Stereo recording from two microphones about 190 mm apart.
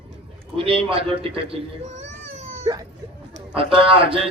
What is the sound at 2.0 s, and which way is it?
Baby cry, 35° right (ahead or behind).